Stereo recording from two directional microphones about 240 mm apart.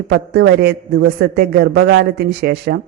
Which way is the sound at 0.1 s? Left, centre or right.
Right.